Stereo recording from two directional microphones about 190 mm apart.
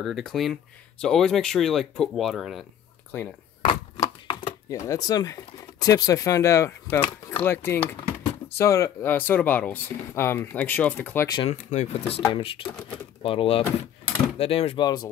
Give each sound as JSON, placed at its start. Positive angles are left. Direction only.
{"t": 0.0, "sound": "speech", "side_deg": 0}
{"t": 3.1, "sound": "speech", "side_deg": 10}
{"t": 3.6, "sound": "speech", "side_deg": 25}
{"t": 11.3, "sound": "speech", "side_deg": 35}
{"t": 12.6, "sound": "speech", "side_deg": 5}
{"t": 13.2, "sound": "speech", "side_deg": 30}